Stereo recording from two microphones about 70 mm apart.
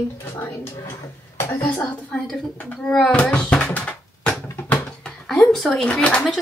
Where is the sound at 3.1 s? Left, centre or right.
Centre.